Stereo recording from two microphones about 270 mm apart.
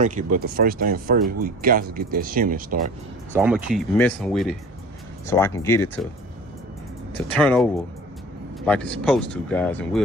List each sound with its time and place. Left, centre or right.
0.0 s speech: right
3.3 s speech: centre
7.3 s speech: centre